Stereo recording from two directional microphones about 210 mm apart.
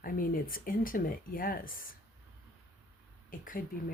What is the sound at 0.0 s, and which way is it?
Speech, 40° left (ahead or behind).